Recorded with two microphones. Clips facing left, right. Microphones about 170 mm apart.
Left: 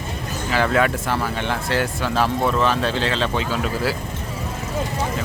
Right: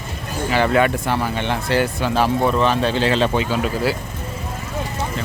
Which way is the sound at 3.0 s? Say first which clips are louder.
Right 4 dB; 10° right (ahead or behind).